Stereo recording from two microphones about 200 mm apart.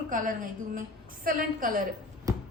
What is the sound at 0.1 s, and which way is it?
A woman's voice, 40° right (ahead or behind).